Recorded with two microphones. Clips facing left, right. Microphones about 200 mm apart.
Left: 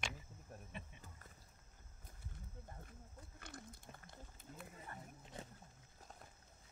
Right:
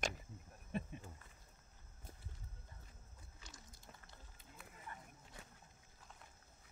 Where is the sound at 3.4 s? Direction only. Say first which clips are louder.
Left 8 dB; 55° left (ahead or behind).